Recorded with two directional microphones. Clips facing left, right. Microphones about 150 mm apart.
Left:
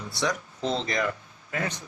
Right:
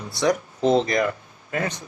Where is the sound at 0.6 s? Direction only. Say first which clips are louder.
Right 9 dB; 50° right (ahead or behind).